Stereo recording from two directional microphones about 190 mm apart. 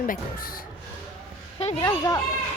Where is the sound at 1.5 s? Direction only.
35° left (ahead or behind).